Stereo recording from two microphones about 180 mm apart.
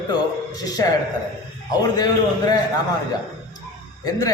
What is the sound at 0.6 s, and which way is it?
A man's voice, 20° left (ahead or behind).